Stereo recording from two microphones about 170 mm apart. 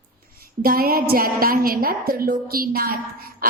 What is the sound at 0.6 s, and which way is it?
A woman's voice, 60° right (ahead or behind).